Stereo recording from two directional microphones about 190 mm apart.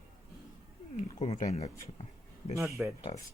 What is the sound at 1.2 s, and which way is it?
Speech, 35° left (ahead or behind).